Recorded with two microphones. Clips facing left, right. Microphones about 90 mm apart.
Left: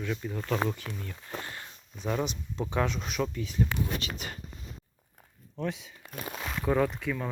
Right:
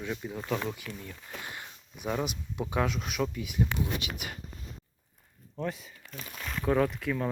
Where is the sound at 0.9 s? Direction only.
30° left (ahead or behind).